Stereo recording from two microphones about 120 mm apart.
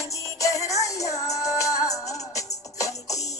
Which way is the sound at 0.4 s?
25° left (ahead or behind).